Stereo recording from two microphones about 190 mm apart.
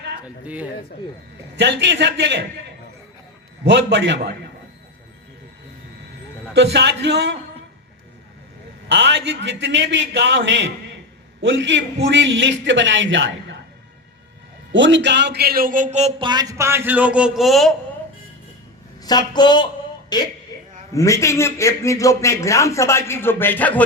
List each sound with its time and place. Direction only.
0.4 s speech: 5° right (ahead or behind)
1.5 s a man's voice: 65° right (ahead or behind)
3.7 s a man's voice: 65° right (ahead or behind)
6.5 s a man's voice: 65° right (ahead or behind)
8.9 s a man's voice: 70° right (ahead or behind)
14.7 s a man's voice: 75° right (ahead or behind); by 17.7 s centre (ahead or behind)
19.0 s speech: 20° left (ahead or behind)
20.5 s a sound: 20° left (ahead or behind)
20.9 s a man's voice: 15° left (ahead or behind)